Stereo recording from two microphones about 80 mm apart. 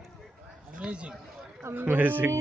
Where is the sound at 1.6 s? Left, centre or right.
Right.